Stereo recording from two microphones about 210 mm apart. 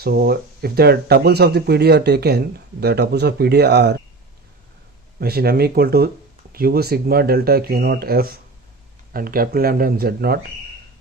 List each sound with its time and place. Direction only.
0.0 s speech: 50° right (ahead or behind)
5.2 s speech: 50° right (ahead or behind)